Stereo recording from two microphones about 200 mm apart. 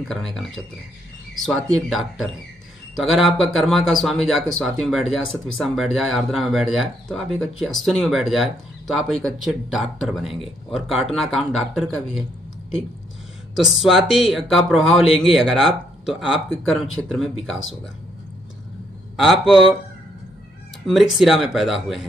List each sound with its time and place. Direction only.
0.1 s speech: centre (ahead or behind)
13.6 s speech: centre (ahead or behind)
15.0 s a man's voice: 30° left (ahead or behind)
15.3 s speech: centre (ahead or behind)
19.1 s speech: centre (ahead or behind)
20.8 s speech: centre (ahead or behind)